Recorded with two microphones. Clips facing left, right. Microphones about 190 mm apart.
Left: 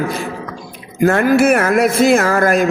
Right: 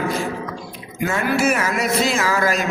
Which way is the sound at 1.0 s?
60° left (ahead or behind).